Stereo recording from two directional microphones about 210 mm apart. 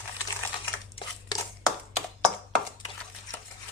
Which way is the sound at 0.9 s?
20° left (ahead or behind).